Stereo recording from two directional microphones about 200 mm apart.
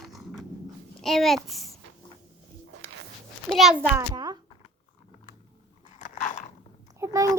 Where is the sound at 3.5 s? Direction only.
Centre (ahead or behind); by 4.3 s 20° right (ahead or behind).